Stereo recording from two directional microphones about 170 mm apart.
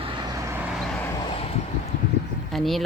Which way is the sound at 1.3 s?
35° left (ahead or behind).